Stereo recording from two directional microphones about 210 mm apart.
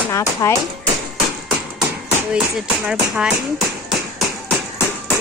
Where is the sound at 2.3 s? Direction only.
5° right (ahead or behind).